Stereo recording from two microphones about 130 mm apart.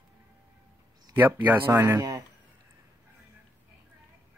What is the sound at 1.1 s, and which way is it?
Speech, 15° right (ahead or behind).